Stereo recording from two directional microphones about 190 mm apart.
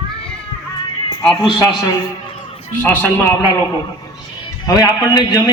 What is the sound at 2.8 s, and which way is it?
Speech, 10° left (ahead or behind).